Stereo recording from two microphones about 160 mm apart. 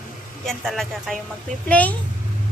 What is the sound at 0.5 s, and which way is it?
A woman's voice, centre (ahead or behind).